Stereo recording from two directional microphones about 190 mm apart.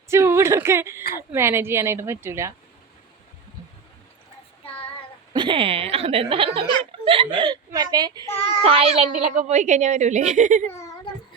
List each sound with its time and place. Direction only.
0.1 s speech: 15° right (ahead or behind)
5.3 s a child's voice: 25° right (ahead or behind); by 10.7 s 40° right (ahead or behind)
10.7 s a sound: 15° left (ahead or behind)